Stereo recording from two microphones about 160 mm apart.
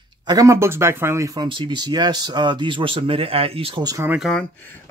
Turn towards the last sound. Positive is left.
turn(degrees=0)  # may be behind; listen again after turning